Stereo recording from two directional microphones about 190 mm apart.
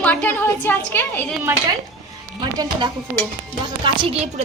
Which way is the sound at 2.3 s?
20° right (ahead or behind).